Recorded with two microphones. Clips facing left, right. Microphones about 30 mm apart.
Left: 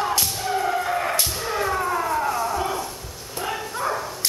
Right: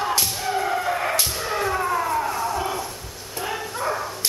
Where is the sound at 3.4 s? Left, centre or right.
Centre.